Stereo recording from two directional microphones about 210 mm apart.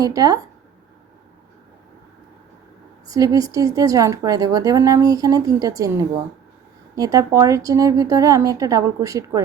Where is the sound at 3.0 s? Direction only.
15° right (ahead or behind).